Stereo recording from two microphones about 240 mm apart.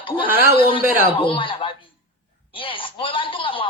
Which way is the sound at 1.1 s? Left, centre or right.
Left.